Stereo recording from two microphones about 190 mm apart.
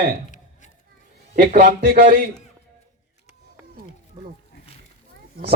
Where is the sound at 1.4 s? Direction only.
55° right (ahead or behind).